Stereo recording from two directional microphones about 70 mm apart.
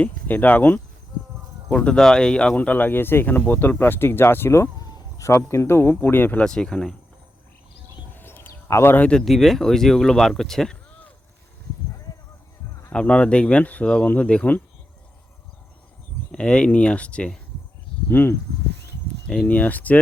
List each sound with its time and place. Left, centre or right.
0.0 s speech: left
1.7 s speech: centre
2.6 s speech: left
4.8 s a sound: left
5.5 s speech: left
6.4 s speech: centre
8.1 s a sound: left
8.6 s speech: left
9.2 s speech: centre
12.9 s speech: centre
16.3 s speech: centre
18.1 s speech: left
19.5 s speech: left